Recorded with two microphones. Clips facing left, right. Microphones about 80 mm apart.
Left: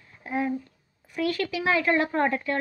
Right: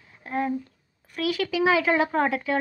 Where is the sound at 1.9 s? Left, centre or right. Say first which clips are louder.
Right 1 dB; centre.